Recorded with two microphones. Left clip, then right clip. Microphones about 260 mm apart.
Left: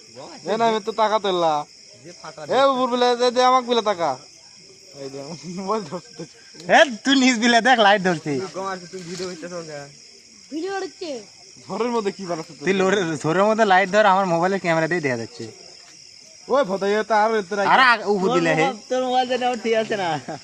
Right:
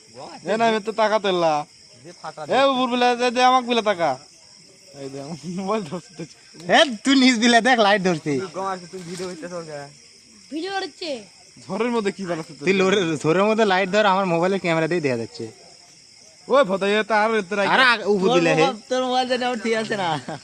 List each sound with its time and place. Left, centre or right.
0.4 s a man's voice: right
2.0 s speech: centre
2.5 s a man's voice: right
6.6 s speech: centre
10.5 s a man's voice: right
12.6 s speech: centre
16.5 s a man's voice: right
17.7 s speech: centre
18.6 s a man's voice: right